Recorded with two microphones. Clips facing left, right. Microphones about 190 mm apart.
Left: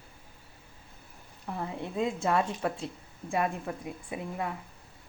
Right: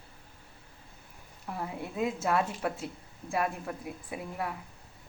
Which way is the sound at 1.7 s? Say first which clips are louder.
Left 3 dB; 25° left (ahead or behind).